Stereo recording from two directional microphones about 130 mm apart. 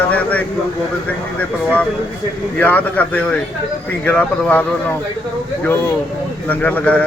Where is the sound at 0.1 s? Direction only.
10° left (ahead or behind).